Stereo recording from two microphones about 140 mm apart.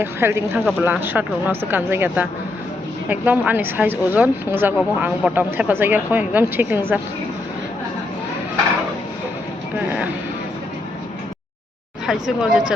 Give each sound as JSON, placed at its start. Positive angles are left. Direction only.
{"t": 0.0, "sound": "speech", "side_deg": -15}
{"t": 12.0, "sound": "speech", "side_deg": -5}